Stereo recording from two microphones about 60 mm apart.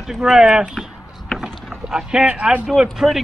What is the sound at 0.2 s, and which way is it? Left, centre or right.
Speech, centre.